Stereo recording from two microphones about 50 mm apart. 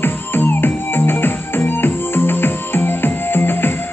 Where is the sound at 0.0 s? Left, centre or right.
Left.